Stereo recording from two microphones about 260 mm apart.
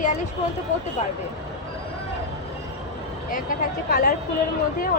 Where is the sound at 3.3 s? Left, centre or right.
Left.